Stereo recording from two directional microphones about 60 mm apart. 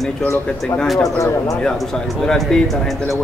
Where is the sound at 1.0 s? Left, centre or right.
Left.